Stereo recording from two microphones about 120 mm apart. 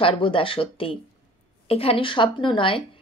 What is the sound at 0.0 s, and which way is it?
Speech, 45° left (ahead or behind).